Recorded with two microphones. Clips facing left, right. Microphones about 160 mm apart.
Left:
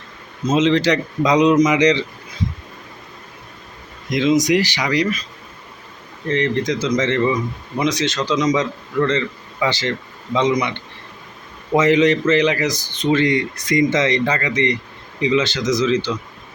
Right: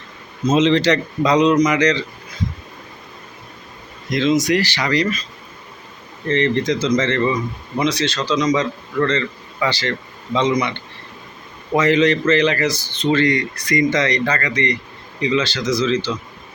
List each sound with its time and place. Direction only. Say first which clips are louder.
0.4 s speech: right 1 dB; 5° left (ahead or behind)
4.1 s speech: left 1 dB; 15° left (ahead or behind)
6.2 s speech: right 1 dB; 10° left (ahead or behind)